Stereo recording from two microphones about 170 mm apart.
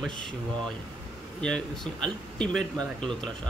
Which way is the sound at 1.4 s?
5° left (ahead or behind).